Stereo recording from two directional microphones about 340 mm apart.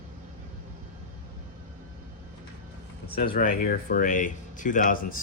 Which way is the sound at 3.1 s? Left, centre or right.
Left.